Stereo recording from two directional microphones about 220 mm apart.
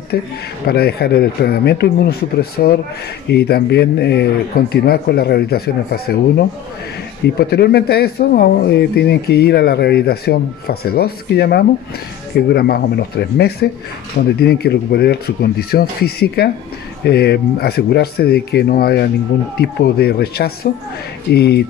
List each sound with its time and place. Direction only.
0.1 s speech: 45° left (ahead or behind)